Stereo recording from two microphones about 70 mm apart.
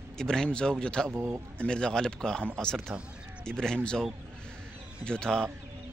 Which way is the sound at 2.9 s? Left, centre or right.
Centre.